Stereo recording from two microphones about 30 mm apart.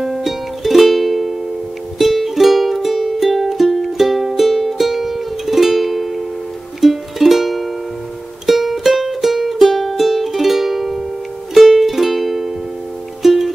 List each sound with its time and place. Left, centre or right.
0.0 s music: centre